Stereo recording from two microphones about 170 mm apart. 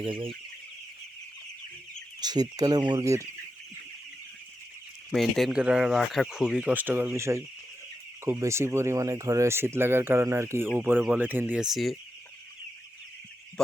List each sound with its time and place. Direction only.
0.0 s chicken: 30° right (ahead or behind)
2.2 s speech: 25° right (ahead or behind)
5.1 s speech: 5° right (ahead or behind)